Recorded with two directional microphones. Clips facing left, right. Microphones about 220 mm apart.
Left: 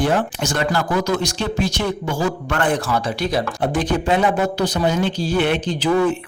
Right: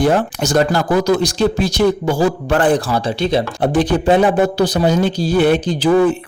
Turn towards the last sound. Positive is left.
turn(degrees=-35)  # may be behind; listen again after turning